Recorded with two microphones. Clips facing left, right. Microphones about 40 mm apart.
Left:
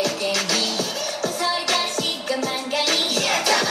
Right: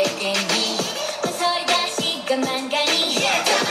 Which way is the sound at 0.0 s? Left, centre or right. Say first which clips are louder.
Right 1 dB; right.